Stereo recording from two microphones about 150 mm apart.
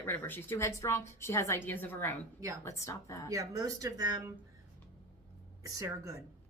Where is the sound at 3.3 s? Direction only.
25° right (ahead or behind).